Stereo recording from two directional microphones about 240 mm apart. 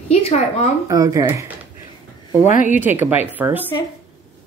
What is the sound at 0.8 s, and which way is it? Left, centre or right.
Speech, centre.